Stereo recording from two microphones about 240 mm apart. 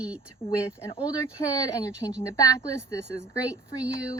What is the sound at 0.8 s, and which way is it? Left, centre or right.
Speech, centre.